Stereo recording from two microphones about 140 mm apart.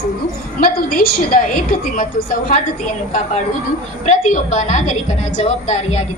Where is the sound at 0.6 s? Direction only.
90° left.